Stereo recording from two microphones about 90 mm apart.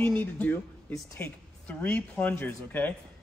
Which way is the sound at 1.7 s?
20° left (ahead or behind).